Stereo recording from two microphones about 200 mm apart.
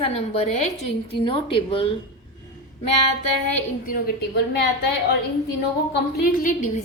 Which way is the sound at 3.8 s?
45° left (ahead or behind).